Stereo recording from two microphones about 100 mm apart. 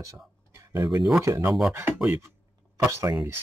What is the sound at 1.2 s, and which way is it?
Speech, 35° right (ahead or behind).